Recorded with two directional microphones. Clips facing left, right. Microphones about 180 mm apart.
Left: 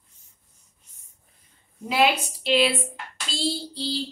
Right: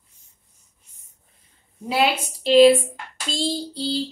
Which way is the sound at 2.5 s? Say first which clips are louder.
Right 10 dB; 45° right (ahead or behind).